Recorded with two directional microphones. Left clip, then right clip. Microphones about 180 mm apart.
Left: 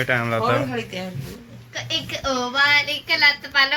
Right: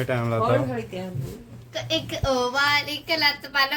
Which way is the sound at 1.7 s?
75° right (ahead or behind).